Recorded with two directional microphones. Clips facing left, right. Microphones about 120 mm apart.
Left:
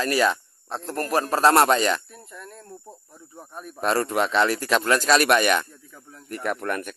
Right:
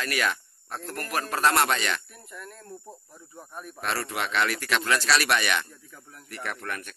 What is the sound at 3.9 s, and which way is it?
Speech, 40° left (ahead or behind).